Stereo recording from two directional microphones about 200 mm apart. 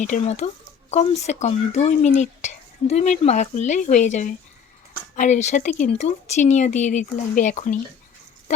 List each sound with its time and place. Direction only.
0.0 s speech: 35° left (ahead or behind)